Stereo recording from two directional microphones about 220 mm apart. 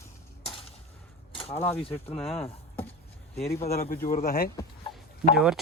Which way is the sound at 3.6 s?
35° left (ahead or behind).